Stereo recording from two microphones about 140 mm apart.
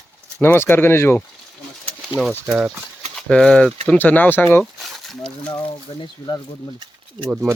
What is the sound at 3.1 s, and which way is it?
Speech, 5° left (ahead or behind).